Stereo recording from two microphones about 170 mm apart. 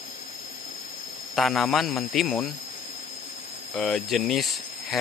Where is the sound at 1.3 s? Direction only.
Centre (ahead or behind).